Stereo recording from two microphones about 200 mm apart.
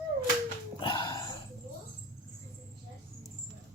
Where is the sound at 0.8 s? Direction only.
20° left (ahead or behind).